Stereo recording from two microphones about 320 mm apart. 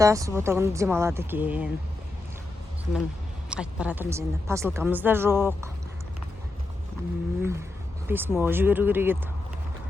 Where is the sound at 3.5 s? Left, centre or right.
Centre.